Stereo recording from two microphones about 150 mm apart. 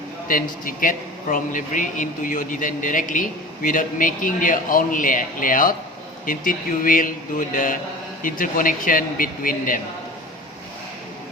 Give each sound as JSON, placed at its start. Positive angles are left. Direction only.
{"t": 0.3, "sound": "a man's voice", "side_deg": 65}